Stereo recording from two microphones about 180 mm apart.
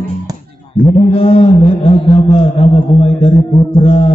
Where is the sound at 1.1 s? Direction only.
30° left (ahead or behind).